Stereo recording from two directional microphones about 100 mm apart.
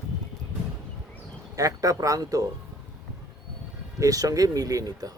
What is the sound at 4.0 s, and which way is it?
Speech, 35° right (ahead or behind).